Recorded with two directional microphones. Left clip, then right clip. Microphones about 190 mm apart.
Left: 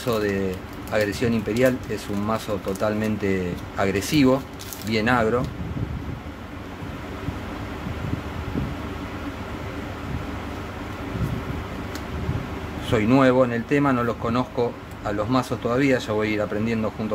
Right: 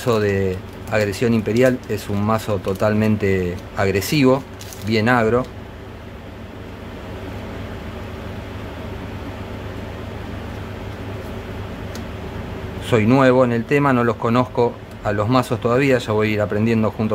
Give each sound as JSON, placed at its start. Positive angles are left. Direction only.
{"t": 0.0, "sound": "speech", "side_deg": -25}
{"t": 12.9, "sound": "speech", "side_deg": -20}